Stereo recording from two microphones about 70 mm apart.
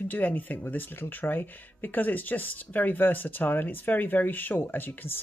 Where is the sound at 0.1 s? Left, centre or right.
Left.